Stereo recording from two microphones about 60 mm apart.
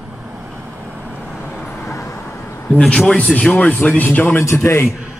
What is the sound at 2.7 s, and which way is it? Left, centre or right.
Speech, centre.